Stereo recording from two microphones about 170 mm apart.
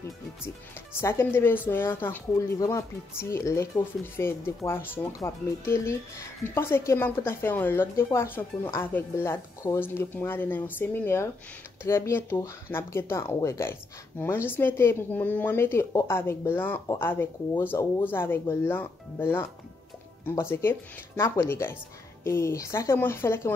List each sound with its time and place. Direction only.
1.0 s speech: 15° left (ahead or behind)